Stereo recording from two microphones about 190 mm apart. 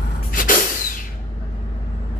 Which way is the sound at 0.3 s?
45° left (ahead or behind).